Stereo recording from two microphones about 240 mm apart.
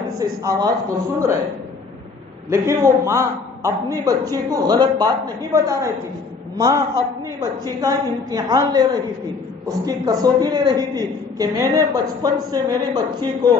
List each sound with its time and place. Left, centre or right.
0.2 s a woman's voice: centre
2.5 s a woman's voice: centre
7.8 s a woman's voice: centre